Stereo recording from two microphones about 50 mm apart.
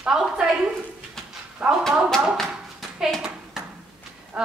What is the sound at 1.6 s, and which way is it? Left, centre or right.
Speech, centre.